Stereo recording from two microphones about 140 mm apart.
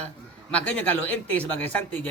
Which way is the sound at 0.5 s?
10° left (ahead or behind).